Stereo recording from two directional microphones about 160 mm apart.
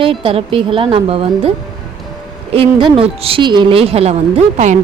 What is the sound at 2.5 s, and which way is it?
A woman's voice, 35° right (ahead or behind).